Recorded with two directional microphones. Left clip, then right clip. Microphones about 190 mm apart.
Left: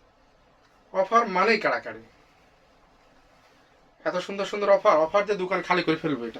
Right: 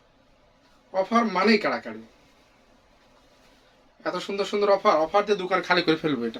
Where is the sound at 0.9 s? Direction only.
25° right (ahead or behind).